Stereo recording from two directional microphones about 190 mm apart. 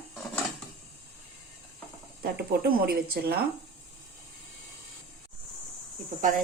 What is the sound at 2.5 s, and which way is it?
Speech, 50° right (ahead or behind).